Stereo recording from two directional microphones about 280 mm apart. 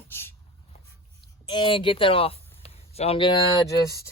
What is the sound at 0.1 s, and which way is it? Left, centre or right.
Writing, centre.